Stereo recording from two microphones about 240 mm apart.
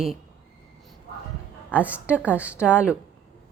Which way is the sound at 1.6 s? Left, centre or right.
Centre.